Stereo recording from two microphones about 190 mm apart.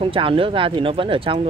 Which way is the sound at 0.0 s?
30° right (ahead or behind).